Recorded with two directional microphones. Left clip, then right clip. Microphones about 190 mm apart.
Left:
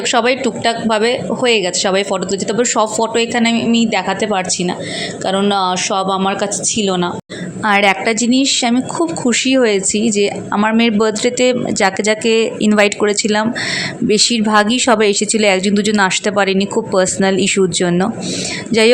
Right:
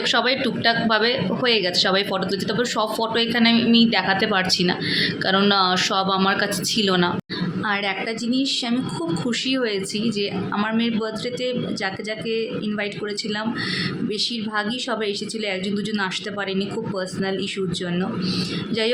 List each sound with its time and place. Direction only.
0.1 s a woman's voice: 35° left (ahead or behind)
7.6 s a woman's voice: 45° left (ahead or behind)
10.8 s speech: 45° left (ahead or behind)